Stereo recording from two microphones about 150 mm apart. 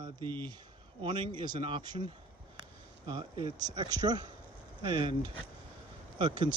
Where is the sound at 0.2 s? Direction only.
15° left (ahead or behind).